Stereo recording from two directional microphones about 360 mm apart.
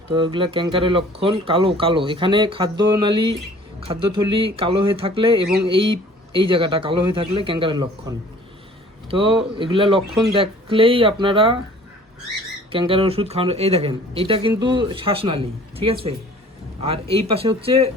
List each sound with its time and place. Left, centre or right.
0.1 s speech: centre
12.7 s speech: centre